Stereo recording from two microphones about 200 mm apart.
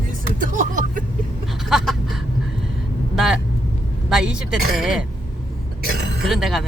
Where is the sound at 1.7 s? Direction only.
Centre (ahead or behind).